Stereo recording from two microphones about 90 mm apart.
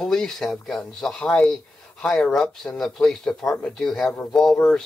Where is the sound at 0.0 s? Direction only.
5° left (ahead or behind).